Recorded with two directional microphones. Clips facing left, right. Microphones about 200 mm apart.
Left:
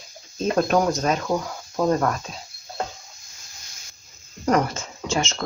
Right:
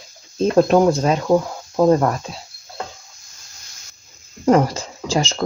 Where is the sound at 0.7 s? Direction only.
30° right (ahead or behind).